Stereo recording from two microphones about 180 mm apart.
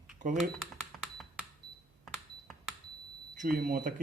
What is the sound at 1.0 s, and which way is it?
Cash register, centre (ahead or behind).